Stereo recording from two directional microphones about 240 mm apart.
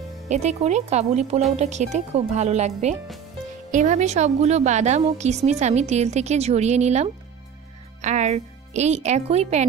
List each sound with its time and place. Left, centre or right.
0.3 s a woman's voice: right